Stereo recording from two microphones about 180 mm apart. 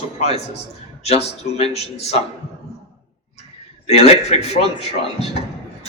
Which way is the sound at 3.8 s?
35° left (ahead or behind).